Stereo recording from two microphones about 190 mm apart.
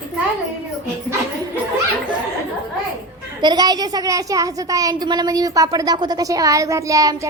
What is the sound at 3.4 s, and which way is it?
A child's voice, 20° right (ahead or behind).